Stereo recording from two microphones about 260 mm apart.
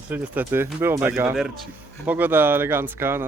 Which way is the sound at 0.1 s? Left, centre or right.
Centre.